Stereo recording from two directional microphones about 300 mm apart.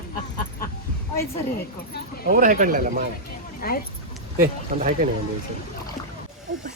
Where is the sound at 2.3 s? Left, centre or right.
Right.